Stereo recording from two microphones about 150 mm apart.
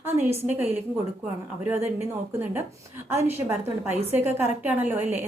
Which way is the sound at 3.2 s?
15° right (ahead or behind).